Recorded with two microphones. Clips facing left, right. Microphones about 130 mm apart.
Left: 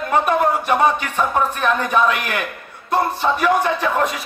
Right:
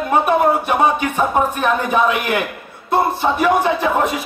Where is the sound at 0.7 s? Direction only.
10° right (ahead or behind).